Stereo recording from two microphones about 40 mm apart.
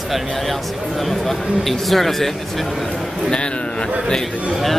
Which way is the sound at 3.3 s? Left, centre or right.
Left.